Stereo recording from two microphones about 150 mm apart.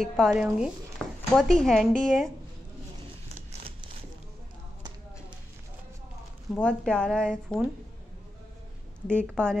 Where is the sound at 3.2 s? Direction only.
40° right (ahead or behind).